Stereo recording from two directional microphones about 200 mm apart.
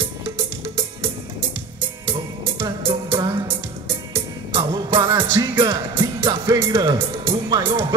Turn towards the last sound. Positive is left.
turn(degrees=-20)  # may be behind; listen again after turning